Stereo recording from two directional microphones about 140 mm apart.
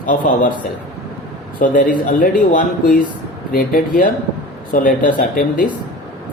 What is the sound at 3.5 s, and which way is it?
Speech, 90° left.